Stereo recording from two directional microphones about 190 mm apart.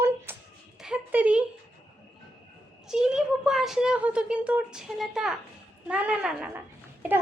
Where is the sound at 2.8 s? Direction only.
5° right (ahead or behind).